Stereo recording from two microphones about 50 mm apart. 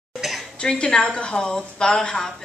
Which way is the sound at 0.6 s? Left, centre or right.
Centre.